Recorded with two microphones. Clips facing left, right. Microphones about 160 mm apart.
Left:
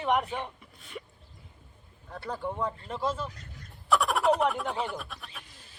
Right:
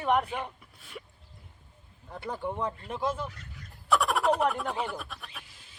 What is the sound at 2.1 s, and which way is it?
Speech, 15° right (ahead or behind).